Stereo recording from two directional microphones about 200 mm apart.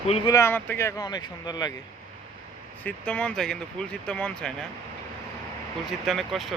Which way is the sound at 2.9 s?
5° left (ahead or behind).